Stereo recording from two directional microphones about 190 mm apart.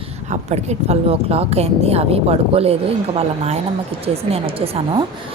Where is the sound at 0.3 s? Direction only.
35° right (ahead or behind).